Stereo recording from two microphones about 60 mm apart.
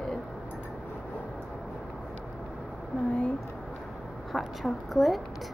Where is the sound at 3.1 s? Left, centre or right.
Centre.